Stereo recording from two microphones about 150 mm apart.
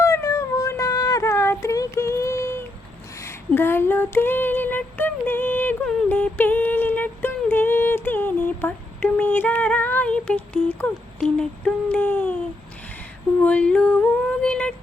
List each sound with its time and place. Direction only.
0.0 s a sound: 20° left (ahead or behind)
3.2 s female singing: 15° left (ahead or behind)
13.4 s female singing: 10° left (ahead or behind)
14.4 s child singing: 5° left (ahead or behind)